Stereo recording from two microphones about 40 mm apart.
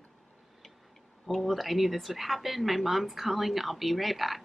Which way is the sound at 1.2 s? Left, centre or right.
Centre.